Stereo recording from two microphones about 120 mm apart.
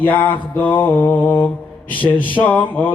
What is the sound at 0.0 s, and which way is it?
Mantra, 15° left (ahead or behind).